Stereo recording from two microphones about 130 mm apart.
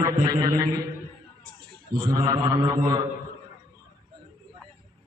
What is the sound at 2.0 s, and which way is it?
A man's voice, 30° right (ahead or behind).